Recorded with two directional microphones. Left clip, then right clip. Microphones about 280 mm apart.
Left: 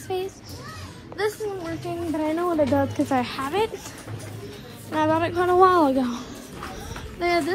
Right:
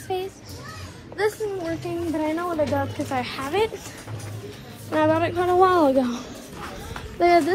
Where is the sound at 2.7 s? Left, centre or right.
Left.